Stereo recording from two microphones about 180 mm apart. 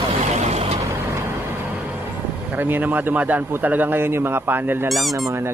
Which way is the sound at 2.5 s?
10° right (ahead or behind).